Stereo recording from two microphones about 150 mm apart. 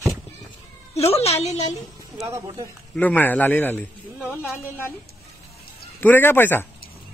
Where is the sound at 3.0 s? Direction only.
10° left (ahead or behind).